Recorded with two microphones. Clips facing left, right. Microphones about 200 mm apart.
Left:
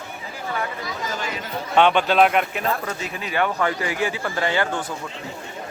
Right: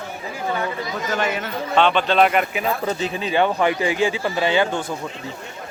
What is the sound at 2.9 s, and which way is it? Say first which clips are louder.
Speech: right 6 dB; 25° right (ahead or behind).